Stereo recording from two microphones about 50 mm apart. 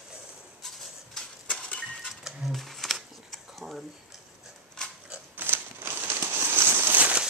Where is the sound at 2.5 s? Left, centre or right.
Centre.